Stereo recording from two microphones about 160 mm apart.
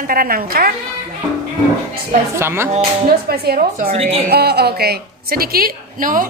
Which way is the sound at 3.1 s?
75° right (ahead or behind).